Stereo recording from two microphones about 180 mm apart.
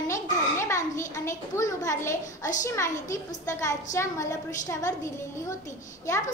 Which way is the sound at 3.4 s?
15° left (ahead or behind).